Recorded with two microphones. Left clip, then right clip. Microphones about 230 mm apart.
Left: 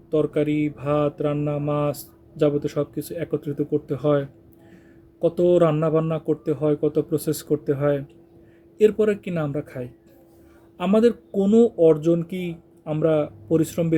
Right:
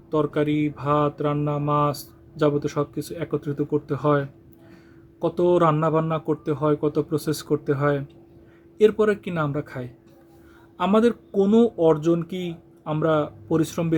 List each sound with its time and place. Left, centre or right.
0.1 s mantra: centre
11.3 s mantra: centre